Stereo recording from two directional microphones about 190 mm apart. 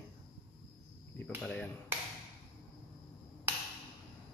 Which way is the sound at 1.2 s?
5° left (ahead or behind).